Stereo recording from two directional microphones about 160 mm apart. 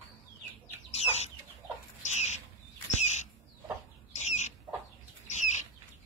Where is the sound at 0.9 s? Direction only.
40° left (ahead or behind).